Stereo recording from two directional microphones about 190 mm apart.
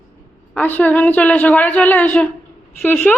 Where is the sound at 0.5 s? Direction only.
10° left (ahead or behind).